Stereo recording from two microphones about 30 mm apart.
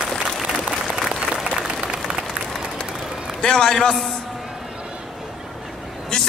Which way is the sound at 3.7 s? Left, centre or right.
Centre.